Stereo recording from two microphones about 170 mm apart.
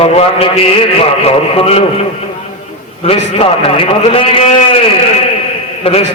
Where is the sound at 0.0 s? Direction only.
35° left (ahead or behind).